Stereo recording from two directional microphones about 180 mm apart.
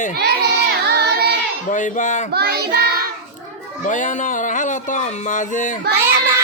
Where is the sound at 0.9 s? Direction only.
65° right (ahead or behind).